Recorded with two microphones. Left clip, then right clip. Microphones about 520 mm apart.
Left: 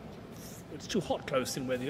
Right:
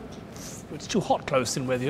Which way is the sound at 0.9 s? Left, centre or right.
Centre.